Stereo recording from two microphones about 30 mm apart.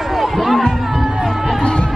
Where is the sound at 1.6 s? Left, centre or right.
Left.